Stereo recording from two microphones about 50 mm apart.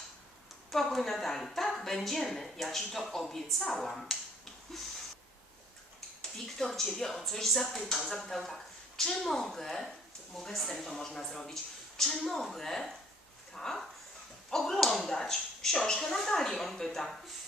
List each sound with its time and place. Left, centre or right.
0.7 s a woman's voice: centre
6.6 s a woman's voice: centre